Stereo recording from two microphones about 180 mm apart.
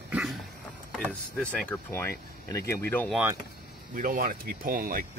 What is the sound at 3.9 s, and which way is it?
Speech, 50° right (ahead or behind).